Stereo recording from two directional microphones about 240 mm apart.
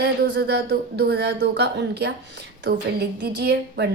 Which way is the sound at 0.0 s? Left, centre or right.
Right.